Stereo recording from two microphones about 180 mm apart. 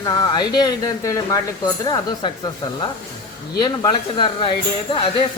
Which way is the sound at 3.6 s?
25° left (ahead or behind).